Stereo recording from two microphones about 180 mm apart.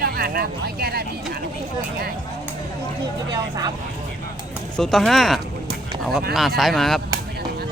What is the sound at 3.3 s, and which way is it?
Speech, 20° right (ahead or behind).